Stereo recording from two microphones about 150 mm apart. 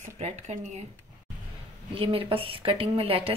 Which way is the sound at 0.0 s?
50° right (ahead or behind).